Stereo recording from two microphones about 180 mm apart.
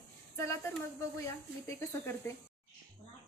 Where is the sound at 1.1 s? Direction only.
15° left (ahead or behind).